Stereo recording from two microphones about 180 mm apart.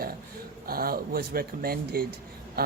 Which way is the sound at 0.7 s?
55° right (ahead or behind).